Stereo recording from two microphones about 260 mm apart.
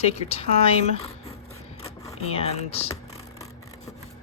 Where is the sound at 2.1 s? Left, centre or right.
Left.